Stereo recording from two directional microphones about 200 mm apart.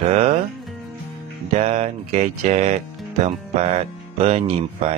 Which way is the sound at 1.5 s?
30° right (ahead or behind).